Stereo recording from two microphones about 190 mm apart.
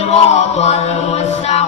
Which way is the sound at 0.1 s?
35° left (ahead or behind).